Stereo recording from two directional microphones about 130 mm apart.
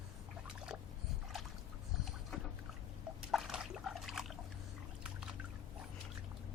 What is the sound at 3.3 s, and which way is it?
Trickle, centre (ahead or behind).